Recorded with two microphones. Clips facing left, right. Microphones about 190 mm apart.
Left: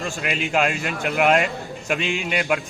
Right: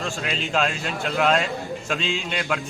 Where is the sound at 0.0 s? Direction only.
10° left (ahead or behind).